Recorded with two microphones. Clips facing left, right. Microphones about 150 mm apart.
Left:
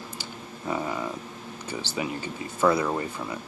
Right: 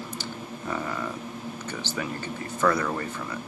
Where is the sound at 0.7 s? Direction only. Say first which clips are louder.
Left 3 dB; 15° left (ahead or behind).